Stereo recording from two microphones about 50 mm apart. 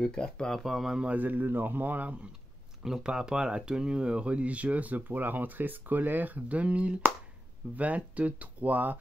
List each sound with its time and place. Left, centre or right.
0.0 s speech: centre
0.7 s a man's voice: centre
1.1 s speech: right
2.8 s speech: centre; by 8.9 s right